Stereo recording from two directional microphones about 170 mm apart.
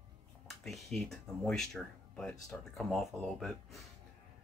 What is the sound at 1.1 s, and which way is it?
Speech, 5° left (ahead or behind).